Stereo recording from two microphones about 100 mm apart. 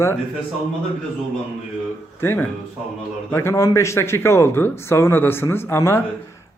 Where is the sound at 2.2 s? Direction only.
25° left (ahead or behind).